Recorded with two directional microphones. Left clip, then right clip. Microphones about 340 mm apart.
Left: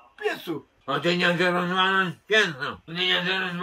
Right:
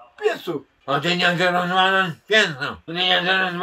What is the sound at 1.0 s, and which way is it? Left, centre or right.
Speech, right.